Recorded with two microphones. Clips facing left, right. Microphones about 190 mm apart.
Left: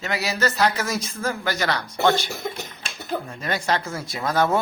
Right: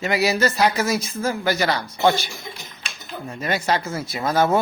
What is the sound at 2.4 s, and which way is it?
Speech, 55° left (ahead or behind).